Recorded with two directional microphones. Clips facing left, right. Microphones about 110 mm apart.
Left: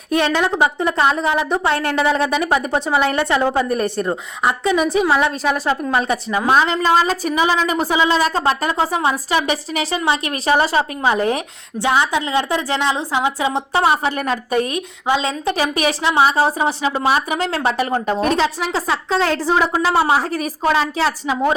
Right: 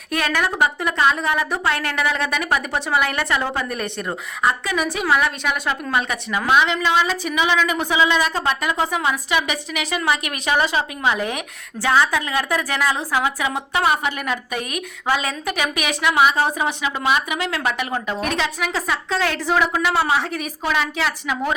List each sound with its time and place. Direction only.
0.1 s a woman's voice: 25° left (ahead or behind)
4.0 s a woman's voice: 25° left (ahead or behind)
11.8 s a woman's voice: 20° left (ahead or behind)
15.0 s a woman's voice: 20° left (ahead or behind)